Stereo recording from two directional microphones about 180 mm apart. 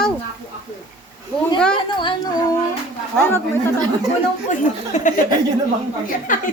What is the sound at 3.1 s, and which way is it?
Speech, 10° left (ahead or behind).